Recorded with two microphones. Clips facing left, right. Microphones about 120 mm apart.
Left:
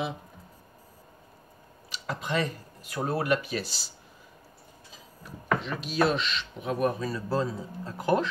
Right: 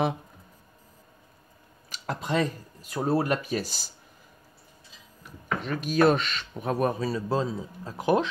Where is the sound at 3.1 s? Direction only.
35° right (ahead or behind).